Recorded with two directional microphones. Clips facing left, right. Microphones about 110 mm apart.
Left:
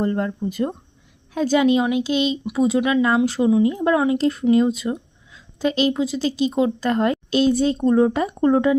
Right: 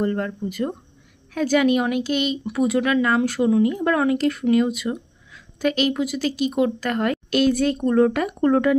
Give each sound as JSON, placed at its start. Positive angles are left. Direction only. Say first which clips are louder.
{"t": 0.0, "sound": "speech", "louder": "left 1 dB", "side_deg": 20}
{"t": 0.4, "sound": "speech", "louder": "left 2 dB", "side_deg": 35}
{"t": 4.2, "sound": "speech", "louder": "left 2 dB", "side_deg": 30}